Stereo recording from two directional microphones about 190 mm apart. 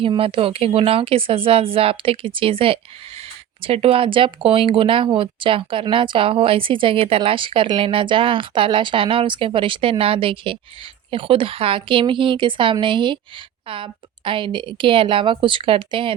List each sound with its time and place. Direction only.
0.0 s a woman's voice: 30° right (ahead or behind)